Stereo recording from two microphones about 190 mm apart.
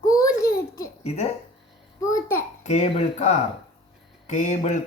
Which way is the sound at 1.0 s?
35° left (ahead or behind).